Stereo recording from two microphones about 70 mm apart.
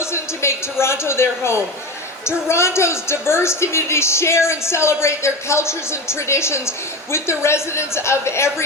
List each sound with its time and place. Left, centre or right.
0.0 s a woman's voice: left